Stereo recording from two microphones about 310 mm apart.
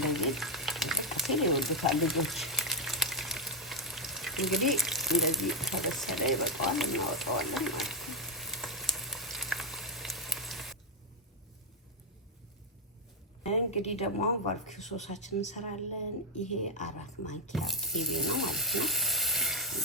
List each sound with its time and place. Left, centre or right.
0.1 s frying: centre
13.4 s speech: left
17.5 s water: centre